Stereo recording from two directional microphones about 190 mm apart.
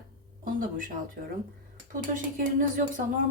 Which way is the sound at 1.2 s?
55° right (ahead or behind).